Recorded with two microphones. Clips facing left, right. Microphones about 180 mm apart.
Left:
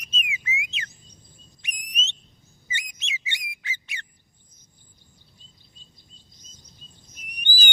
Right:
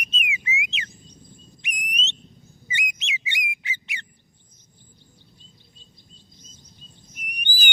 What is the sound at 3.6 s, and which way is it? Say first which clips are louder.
Squawk: right 2 dB; 15° right (ahead or behind).